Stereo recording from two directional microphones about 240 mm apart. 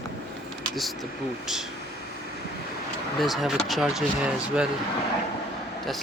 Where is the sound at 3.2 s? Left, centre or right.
Centre.